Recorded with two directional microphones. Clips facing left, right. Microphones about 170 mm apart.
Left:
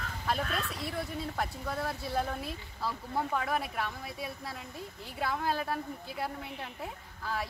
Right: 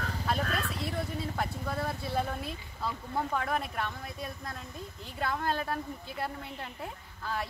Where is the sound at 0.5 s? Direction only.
Centre (ahead or behind).